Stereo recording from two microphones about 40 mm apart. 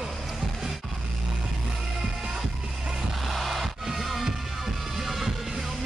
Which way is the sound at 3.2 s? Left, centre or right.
Centre.